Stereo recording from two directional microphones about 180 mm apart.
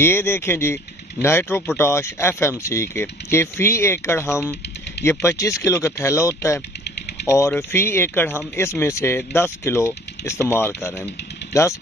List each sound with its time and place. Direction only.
0.0 s speech: 15° left (ahead or behind)